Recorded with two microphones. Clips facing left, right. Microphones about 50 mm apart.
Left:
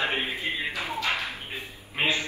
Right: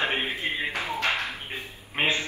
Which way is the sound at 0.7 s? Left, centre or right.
Right.